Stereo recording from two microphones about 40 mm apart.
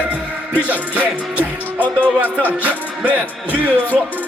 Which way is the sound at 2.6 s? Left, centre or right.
Right.